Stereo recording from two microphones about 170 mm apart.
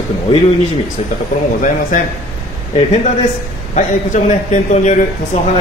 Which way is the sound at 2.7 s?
40° left (ahead or behind).